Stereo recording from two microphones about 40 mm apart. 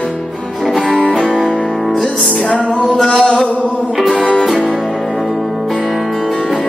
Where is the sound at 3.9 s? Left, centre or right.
Centre.